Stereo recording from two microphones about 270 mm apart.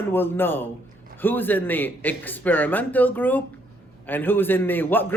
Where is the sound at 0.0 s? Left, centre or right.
Centre.